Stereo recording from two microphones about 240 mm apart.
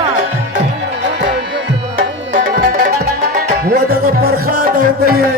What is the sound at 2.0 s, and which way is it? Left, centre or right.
Music, right.